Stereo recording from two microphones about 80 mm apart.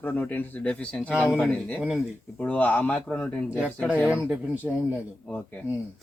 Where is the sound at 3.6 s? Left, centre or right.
Centre.